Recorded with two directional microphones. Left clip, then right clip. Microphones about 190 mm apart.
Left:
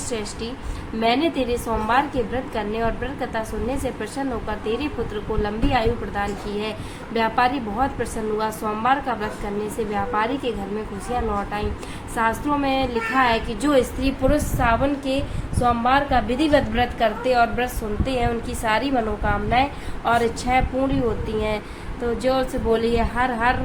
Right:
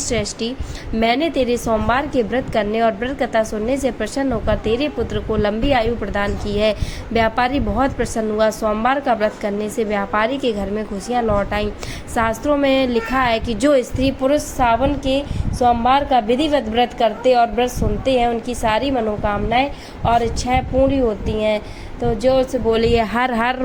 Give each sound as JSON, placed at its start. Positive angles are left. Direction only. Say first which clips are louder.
{"t": 0.1, "sound": "a woman's voice", "louder": "right 6 dB", "side_deg": -35}
{"t": 22.7, "sound": "a woman's voice", "louder": "right 4 dB", "side_deg": -35}